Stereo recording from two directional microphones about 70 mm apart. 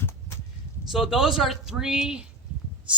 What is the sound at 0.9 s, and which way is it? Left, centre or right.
Speech, centre.